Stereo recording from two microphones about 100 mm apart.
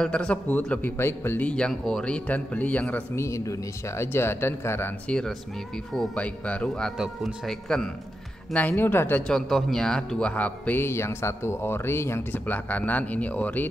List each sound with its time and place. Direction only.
0.0 s a man's voice: 10° left (ahead or behind)
3.2 s speech: 30° left (ahead or behind)
5.0 s a man's voice: 10° left (ahead or behind)
8.5 s speech: 20° left (ahead or behind)
9.3 s a man's voice: centre (ahead or behind)